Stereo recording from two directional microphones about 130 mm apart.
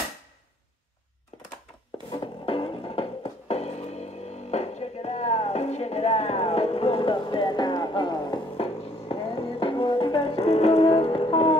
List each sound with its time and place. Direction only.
2.0 s music: 40° left (ahead or behind)